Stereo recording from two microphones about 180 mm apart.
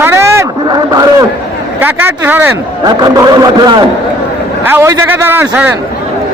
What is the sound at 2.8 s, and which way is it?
Speech, 25° right (ahead or behind).